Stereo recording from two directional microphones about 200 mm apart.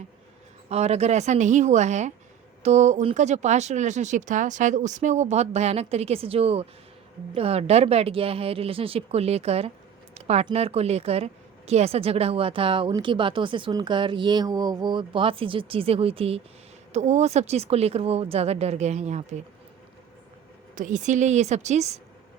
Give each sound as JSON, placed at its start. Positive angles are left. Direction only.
{"t": 0.7, "sound": "speech", "side_deg": -30}
{"t": 10.2, "sound": "a sound", "side_deg": -35}
{"t": 10.4, "sound": "speech", "side_deg": -30}
{"t": 20.7, "sound": "speech", "side_deg": -40}